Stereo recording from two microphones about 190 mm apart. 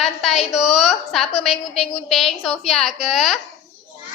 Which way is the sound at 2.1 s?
Centre (ahead or behind).